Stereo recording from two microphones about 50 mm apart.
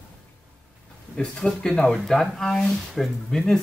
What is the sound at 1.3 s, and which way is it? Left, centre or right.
Speech, centre.